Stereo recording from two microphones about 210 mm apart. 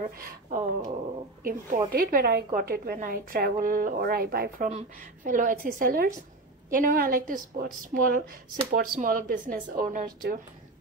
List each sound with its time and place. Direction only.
0.0 s a woman's voice: 35° right (ahead or behind)
4.6 s a woman's voice: 35° right (ahead or behind)